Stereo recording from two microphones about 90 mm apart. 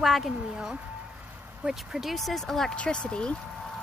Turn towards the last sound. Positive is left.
turn(degrees=10)  # may be behind; listen again after turning